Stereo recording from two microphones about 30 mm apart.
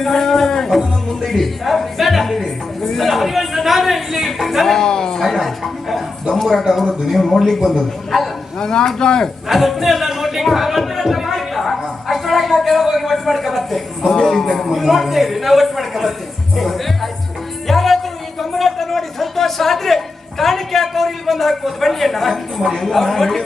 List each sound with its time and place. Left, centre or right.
0.0 s a sound: centre
1.2 s a man's voice: centre
4.6 s a man's voice: centre
4.9 s speech: left
5.2 s a man's voice: centre
8.1 s a man's voice: centre
8.5 s speech: left
9.5 s speech: centre
11.0 s a sound: centre
14.0 s a man's voice: centre
14.7 s a man's voice: centre
17.7 s a sound: centre
20.4 s a man's voice: centre